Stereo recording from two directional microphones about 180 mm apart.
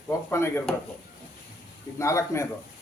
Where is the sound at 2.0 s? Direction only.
15° left (ahead or behind).